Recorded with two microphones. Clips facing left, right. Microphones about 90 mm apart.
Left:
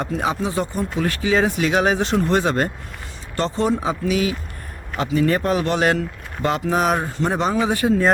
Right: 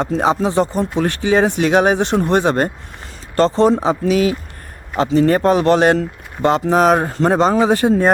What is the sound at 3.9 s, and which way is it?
Speech, 50° right (ahead or behind).